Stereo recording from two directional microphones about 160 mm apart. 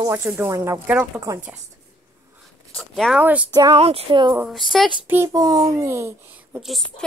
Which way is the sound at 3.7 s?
40° right (ahead or behind).